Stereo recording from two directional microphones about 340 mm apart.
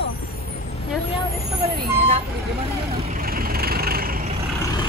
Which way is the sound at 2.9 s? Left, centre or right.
Right.